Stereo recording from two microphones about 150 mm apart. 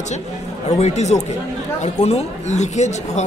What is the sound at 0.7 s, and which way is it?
A woman's voice, 45° left (ahead or behind).